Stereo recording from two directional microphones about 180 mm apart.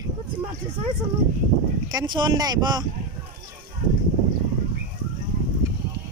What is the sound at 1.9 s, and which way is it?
Speech, 25° right (ahead or behind).